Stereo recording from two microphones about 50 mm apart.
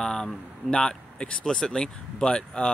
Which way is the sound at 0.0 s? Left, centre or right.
Centre.